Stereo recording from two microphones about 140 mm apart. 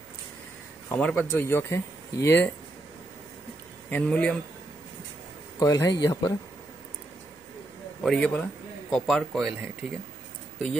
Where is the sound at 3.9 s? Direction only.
10° left (ahead or behind).